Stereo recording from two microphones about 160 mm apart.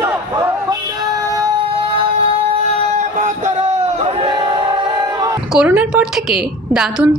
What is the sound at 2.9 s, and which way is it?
Crowd, 45° right (ahead or behind).